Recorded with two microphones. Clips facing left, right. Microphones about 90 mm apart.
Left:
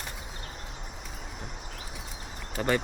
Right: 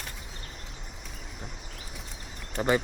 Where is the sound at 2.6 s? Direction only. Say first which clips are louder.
Right 2 dB; 20° right (ahead or behind).